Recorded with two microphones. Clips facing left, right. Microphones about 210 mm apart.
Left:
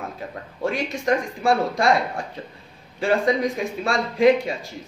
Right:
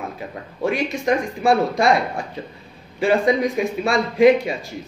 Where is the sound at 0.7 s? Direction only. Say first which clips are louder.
Right 2 dB; 15° right (ahead or behind).